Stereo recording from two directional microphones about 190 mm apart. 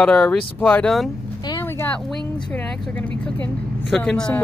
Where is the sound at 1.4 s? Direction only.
15° left (ahead or behind).